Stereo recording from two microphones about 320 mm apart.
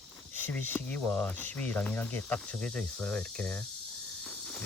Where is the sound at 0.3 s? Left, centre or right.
Centre.